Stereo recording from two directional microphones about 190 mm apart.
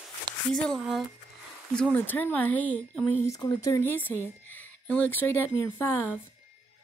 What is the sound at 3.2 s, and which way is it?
Speech, 20° left (ahead or behind).